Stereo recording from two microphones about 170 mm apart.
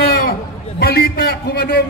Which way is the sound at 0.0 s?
60° left (ahead or behind).